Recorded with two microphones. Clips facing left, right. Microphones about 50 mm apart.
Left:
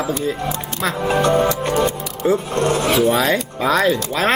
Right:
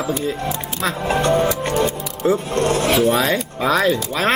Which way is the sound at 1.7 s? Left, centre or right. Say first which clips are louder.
Left 1 dB; centre.